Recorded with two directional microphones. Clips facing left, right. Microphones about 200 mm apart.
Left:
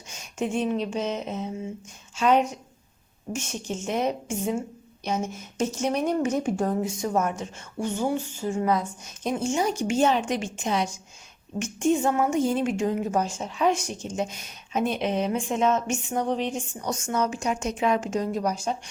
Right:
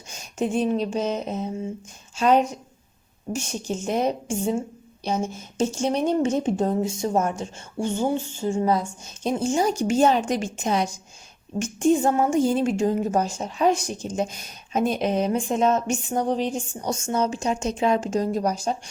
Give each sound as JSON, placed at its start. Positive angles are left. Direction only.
{"t": 0.1, "sound": "a woman's voice", "side_deg": -35}